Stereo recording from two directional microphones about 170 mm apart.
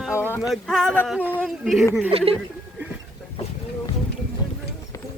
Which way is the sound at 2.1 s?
35° right (ahead or behind).